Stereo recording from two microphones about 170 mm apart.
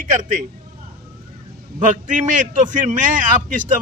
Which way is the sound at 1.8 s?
45° right (ahead or behind).